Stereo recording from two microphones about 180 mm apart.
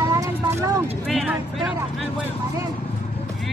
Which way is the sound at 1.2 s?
Centre (ahead or behind).